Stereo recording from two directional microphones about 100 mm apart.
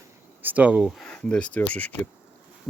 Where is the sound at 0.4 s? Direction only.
15° right (ahead or behind).